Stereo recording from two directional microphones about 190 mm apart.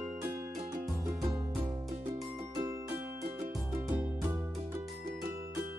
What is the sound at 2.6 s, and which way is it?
Music, 15° right (ahead or behind).